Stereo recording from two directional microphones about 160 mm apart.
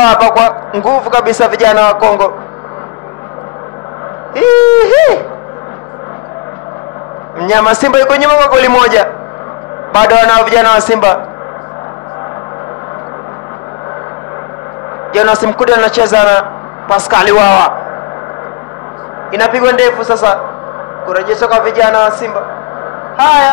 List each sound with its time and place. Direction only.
0.0 s a man's voice: 20° left (ahead or behind)
4.4 s a man's voice: 15° left (ahead or behind)
7.3 s a man's voice: 15° left (ahead or behind)
15.1 s a man's voice: 20° left (ahead or behind)
19.3 s a man's voice: 15° left (ahead or behind)
23.1 s a man's voice: 15° left (ahead or behind)